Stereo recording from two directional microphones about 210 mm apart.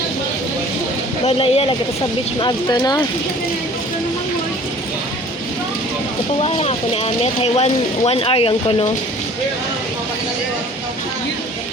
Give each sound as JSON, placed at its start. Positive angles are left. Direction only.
{"t": 1.2, "sound": "speech", "side_deg": 30}
{"t": 6.4, "sound": "speech", "side_deg": 30}